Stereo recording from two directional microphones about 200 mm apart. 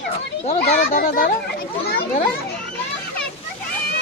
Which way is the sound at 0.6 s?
45° left (ahead or behind).